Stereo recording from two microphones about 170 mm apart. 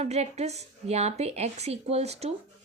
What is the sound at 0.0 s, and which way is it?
Speech, 40° right (ahead or behind).